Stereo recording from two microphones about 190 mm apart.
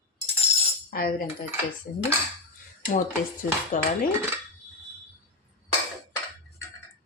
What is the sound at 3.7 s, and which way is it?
Speech, 40° left (ahead or behind).